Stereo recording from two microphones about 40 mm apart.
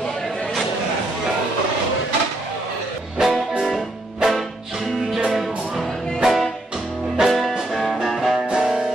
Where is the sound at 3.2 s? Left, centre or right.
Centre.